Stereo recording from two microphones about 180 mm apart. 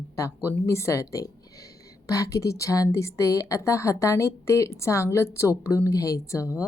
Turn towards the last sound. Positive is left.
turn(degrees=15)  # may be behind; listen again after turning